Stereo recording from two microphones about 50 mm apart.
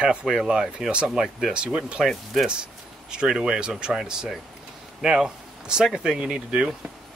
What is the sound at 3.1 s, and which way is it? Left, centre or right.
Speech, centre.